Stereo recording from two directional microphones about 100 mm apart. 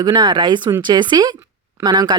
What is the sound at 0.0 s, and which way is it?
Speech, 50° right (ahead or behind).